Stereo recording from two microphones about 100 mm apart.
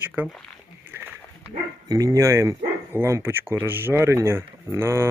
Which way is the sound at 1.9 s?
35° right (ahead or behind).